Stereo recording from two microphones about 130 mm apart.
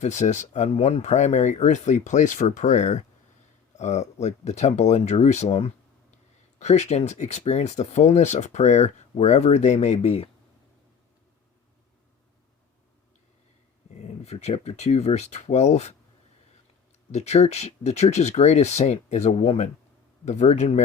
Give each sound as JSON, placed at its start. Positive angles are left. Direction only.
{"t": 0.0, "sound": "speech", "side_deg": 65}
{"t": 14.3, "sound": "speech", "side_deg": 55}
{"t": 17.1, "sound": "speech", "side_deg": 60}